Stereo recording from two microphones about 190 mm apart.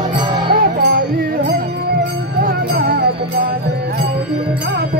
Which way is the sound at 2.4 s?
50° right (ahead or behind).